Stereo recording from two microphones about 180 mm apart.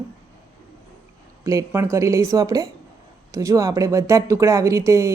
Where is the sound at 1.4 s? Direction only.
15° right (ahead or behind).